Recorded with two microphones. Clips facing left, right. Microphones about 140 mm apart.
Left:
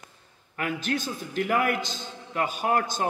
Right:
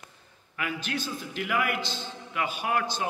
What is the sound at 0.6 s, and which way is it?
A man's voice, 45° left (ahead or behind).